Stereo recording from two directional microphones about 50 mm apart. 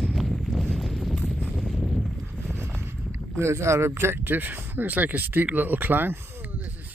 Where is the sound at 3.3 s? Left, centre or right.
Right.